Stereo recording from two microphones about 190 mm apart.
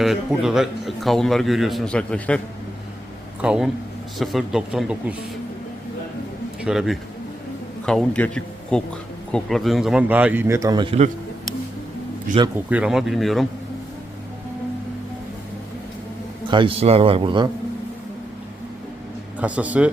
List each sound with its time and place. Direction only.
0.0 s a man's voice: centre (ahead or behind)
3.4 s a man's voice: 5° right (ahead or behind)
6.6 s a man's voice: 5° right (ahead or behind); by 11.1 s 30° right (ahead or behind)
12.5 s a man's voice: 5° right (ahead or behind)
16.5 s a man's voice: 25° right (ahead or behind)
19.4 s a man's voice: 5° right (ahead or behind)